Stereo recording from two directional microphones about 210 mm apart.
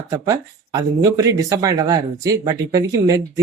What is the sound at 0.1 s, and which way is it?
Speech, 15° right (ahead or behind).